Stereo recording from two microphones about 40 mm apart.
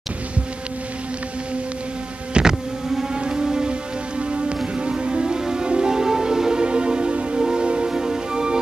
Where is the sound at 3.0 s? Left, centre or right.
Centre.